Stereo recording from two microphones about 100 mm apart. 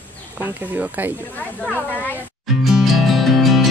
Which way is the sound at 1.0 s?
15° right (ahead or behind).